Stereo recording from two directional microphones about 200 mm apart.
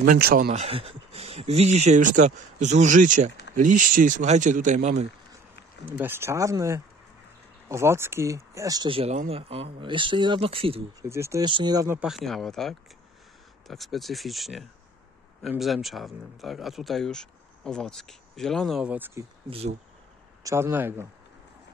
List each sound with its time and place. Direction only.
0.0 s speech: 45° right (ahead or behind)
0.5 s speech: 30° right (ahead or behind)
5.9 s speech: 10° right (ahead or behind); by 10.8 s 25° right (ahead or behind)
11.0 s speech: 15° right (ahead or behind)
12.1 s speech: centre (ahead or behind)
19.5 s speech: 30° right (ahead or behind)
20.4 s speech: 15° right (ahead or behind)